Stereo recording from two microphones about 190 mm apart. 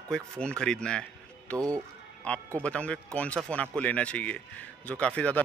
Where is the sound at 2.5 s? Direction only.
5° left (ahead or behind).